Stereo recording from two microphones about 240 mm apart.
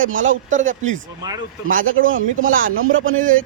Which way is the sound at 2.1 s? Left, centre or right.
Right.